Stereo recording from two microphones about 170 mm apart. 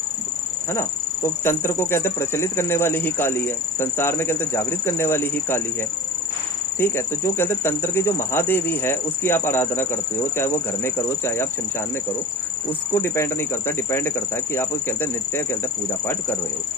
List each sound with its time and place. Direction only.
0.7 s insect: 15° left (ahead or behind)
6.7 s insect: 15° left (ahead or behind)
12.9 s insect: 15° left (ahead or behind)